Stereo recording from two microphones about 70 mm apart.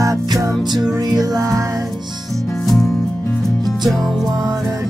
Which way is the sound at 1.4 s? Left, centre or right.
Right.